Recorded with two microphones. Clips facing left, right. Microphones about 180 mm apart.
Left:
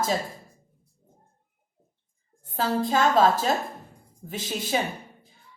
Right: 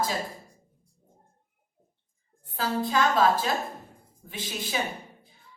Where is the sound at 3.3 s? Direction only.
45° left (ahead or behind).